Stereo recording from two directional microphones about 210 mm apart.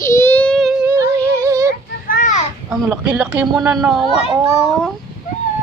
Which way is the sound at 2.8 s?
10° right (ahead or behind).